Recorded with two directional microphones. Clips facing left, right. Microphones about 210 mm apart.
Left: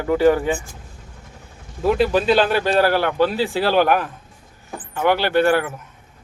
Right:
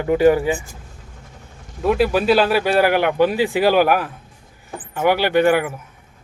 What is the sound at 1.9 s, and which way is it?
Speech, 5° right (ahead or behind).